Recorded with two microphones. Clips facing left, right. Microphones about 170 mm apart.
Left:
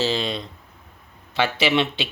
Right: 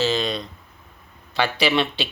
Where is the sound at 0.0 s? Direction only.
30° left (ahead or behind).